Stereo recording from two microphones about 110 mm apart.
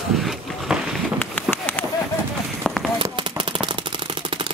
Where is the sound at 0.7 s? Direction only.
5° right (ahead or behind).